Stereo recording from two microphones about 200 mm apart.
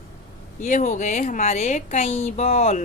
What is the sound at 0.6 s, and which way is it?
A woman's voice, 40° left (ahead or behind).